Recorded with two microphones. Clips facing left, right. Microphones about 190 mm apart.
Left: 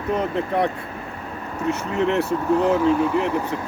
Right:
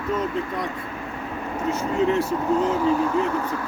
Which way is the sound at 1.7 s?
65° left (ahead or behind).